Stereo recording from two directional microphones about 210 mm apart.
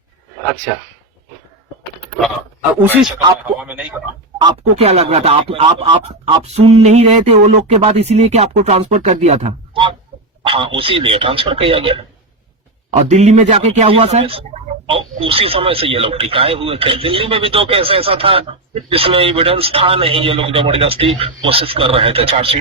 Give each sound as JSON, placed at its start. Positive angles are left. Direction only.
{"t": 2.8, "sound": "speech", "side_deg": -10}
{"t": 4.8, "sound": "speech", "side_deg": -30}
{"t": 13.0, "sound": "speech", "side_deg": -35}